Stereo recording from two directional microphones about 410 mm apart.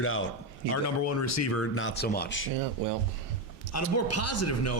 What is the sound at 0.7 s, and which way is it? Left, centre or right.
A man's voice, left.